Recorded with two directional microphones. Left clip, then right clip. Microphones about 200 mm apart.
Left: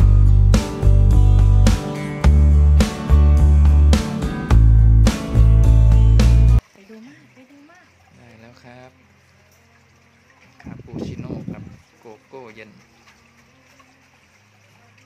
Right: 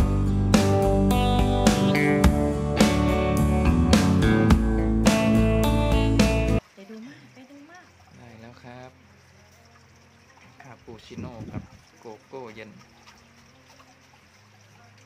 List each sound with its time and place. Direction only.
0.3 s music: centre (ahead or behind)
8.2 s pour: centre (ahead or behind)
10.7 s a sound: centre (ahead or behind)